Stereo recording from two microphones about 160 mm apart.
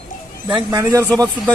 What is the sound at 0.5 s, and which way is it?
Speech, 20° right (ahead or behind).